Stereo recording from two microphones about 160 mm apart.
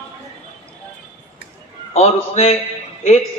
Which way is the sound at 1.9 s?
40° left (ahead or behind).